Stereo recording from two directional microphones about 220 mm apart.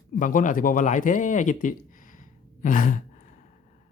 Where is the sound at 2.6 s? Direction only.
35° left (ahead or behind).